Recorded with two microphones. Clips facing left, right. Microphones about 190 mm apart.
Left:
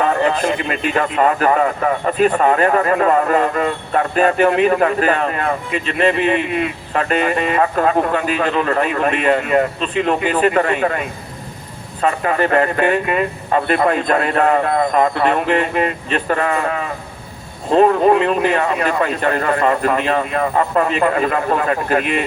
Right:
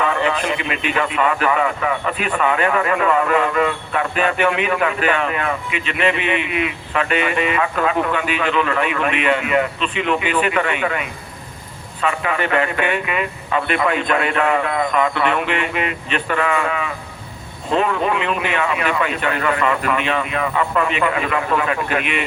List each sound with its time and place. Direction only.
0.0 s speech: 40° left (ahead or behind)